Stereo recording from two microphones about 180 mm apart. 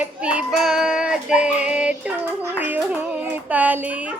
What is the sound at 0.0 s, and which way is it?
Child singing, 5° right (ahead or behind).